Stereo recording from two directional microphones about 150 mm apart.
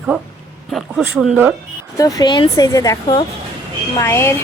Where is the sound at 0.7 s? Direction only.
Centre (ahead or behind).